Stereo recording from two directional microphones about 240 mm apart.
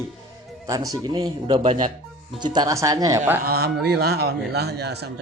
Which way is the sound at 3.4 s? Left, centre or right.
Right.